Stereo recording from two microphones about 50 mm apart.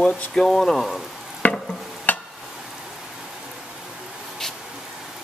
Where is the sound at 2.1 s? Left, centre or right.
Left.